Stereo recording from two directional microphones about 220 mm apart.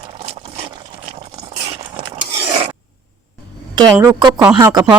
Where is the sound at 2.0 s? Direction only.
25° right (ahead or behind).